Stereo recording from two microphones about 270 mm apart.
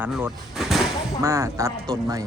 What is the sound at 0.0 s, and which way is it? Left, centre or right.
Speech, centre.